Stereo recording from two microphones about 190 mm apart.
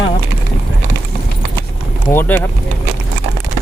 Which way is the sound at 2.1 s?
10° left (ahead or behind).